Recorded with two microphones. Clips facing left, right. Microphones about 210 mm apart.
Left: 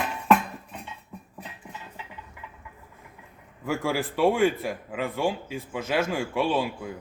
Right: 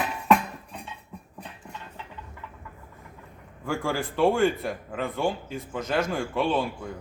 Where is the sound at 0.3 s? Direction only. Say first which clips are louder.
Even; centre (ahead or behind).